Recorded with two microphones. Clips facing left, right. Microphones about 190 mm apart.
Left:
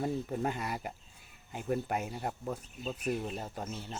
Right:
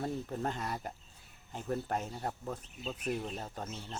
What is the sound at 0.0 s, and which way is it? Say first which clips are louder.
Speech: left 3 dB; 10° left (ahead or behind).